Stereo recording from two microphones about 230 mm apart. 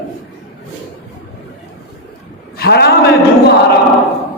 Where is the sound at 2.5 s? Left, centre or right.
Left.